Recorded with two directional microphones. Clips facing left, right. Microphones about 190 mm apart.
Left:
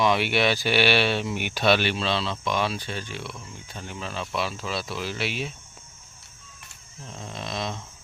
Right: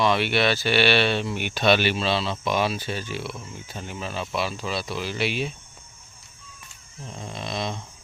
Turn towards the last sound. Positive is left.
turn(degrees=0)  # may be behind; listen again after turning